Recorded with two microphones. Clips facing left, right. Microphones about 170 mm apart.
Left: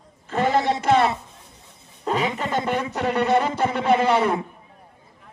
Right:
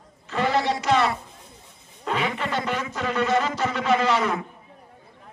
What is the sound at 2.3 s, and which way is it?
Speech, 40° left (ahead or behind).